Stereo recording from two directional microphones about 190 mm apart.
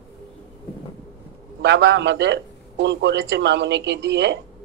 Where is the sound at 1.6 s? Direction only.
65° right (ahead or behind).